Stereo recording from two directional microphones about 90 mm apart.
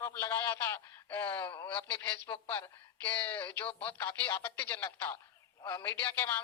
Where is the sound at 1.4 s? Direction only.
55° left (ahead or behind).